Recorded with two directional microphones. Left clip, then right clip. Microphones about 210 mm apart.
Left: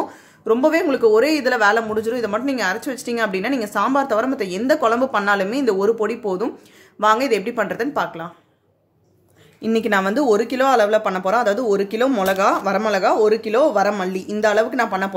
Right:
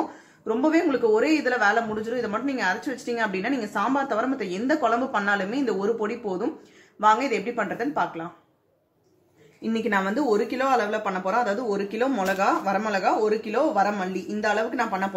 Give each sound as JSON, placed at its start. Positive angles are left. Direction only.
{"t": 0.5, "sound": "speech", "side_deg": 40}
{"t": 9.6, "sound": "speech", "side_deg": 50}